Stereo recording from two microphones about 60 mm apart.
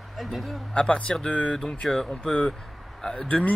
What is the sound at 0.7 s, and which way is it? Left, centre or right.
Speech, centre.